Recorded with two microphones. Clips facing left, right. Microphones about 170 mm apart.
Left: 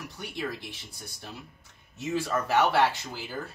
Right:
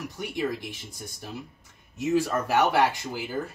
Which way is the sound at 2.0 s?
5° right (ahead or behind).